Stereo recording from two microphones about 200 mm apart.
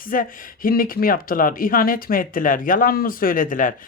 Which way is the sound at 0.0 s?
45° left (ahead or behind).